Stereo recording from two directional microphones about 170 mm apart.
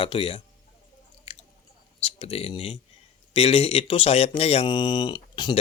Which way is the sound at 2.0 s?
35° left (ahead or behind).